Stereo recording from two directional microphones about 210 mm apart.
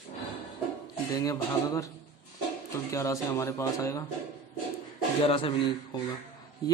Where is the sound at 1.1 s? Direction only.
15° left (ahead or behind).